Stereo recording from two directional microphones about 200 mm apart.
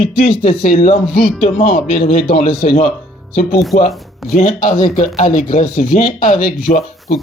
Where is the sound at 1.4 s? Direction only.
40° left (ahead or behind).